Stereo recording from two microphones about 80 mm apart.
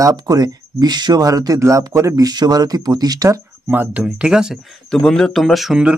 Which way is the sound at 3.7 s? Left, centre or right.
Right.